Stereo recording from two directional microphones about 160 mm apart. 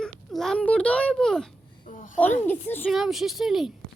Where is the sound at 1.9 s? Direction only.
55° left (ahead or behind).